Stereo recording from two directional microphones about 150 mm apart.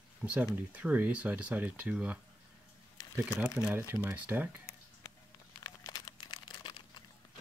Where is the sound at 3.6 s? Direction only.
5° right (ahead or behind).